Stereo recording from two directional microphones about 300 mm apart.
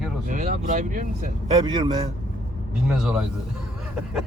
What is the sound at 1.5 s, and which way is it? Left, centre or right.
Speech, centre.